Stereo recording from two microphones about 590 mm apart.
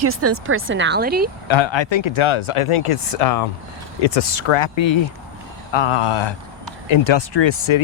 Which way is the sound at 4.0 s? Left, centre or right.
Left.